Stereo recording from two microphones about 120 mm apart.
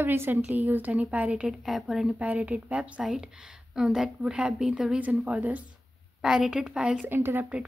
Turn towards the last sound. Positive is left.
turn(degrees=-15)  # may be behind; listen again after turning